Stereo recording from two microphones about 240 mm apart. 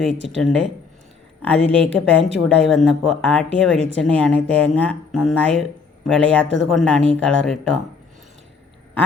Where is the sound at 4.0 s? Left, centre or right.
Centre.